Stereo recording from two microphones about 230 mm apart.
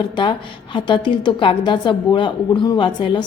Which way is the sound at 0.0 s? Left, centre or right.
Left.